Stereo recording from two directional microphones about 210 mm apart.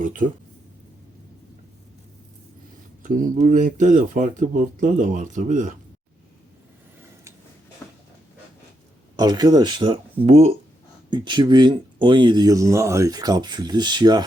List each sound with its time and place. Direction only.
0.0 s speech: 40° right (ahead or behind)
3.0 s speech: 40° right (ahead or behind)
9.1 s speech: 20° right (ahead or behind)